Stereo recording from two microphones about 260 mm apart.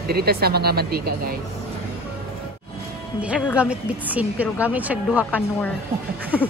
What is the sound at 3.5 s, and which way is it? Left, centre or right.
A woman's voice, centre.